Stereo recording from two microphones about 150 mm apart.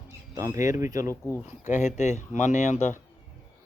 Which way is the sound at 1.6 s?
55° left (ahead or behind).